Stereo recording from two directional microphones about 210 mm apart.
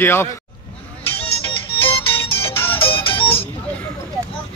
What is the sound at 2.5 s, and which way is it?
Music, 10° left (ahead or behind).